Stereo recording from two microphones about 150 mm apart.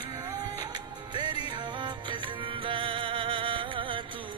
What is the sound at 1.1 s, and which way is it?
Music, 30° right (ahead or behind).